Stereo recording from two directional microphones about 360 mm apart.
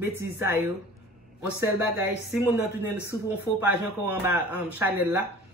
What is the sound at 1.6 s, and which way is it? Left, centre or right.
A man's voice, centre.